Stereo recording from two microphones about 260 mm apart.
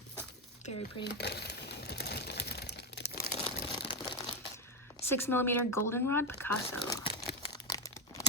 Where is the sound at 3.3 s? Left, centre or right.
Centre.